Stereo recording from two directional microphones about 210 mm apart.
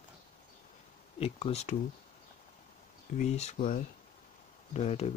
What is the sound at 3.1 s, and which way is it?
Speech, 30° left (ahead or behind).